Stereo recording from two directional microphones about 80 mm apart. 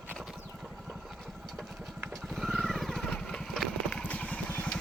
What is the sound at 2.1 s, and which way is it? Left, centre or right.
Vehicle, centre.